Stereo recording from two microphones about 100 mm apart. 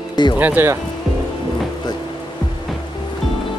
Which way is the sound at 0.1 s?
45° left (ahead or behind).